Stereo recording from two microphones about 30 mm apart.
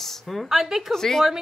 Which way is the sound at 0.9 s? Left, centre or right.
Centre.